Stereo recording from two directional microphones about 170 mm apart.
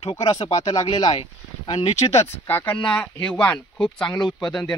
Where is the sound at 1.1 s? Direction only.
35° left (ahead or behind).